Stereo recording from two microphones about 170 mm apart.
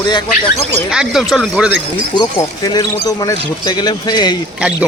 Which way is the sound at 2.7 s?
25° left (ahead or behind).